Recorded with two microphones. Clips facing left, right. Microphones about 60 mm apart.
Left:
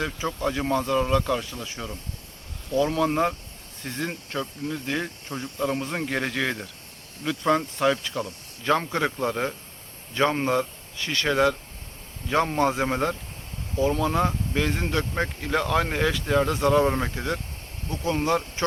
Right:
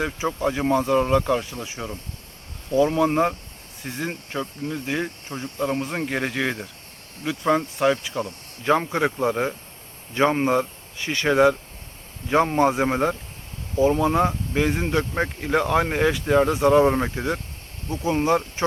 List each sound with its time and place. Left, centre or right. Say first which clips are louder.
0.0 s speech: right 3 dB; centre